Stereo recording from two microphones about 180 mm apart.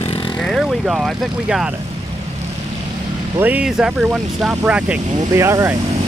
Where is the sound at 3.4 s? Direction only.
10° right (ahead or behind).